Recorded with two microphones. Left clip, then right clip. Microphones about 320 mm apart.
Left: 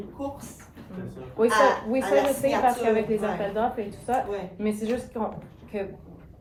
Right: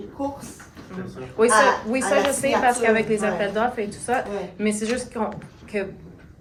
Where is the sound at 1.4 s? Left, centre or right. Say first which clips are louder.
Right 4 dB; right.